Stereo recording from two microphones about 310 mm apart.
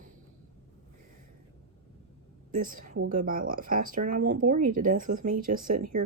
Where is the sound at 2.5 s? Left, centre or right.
Right.